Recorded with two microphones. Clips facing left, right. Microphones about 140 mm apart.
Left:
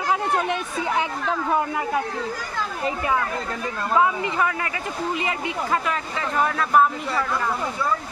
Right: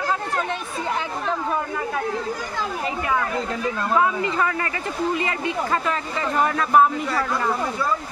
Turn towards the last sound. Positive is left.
turn(degrees=0)  # may be behind; listen again after turning